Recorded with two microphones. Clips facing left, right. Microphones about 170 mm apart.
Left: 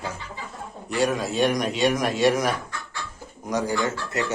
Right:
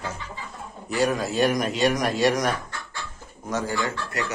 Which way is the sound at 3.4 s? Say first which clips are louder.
Left 2 dB; 15° left (ahead or behind).